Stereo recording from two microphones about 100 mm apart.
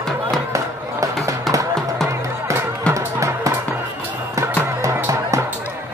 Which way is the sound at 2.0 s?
30° right (ahead or behind).